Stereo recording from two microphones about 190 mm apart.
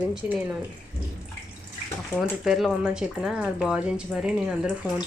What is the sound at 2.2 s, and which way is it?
Speech, centre (ahead or behind).